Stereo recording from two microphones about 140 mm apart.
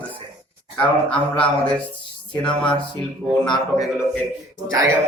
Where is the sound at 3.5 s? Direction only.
25° left (ahead or behind).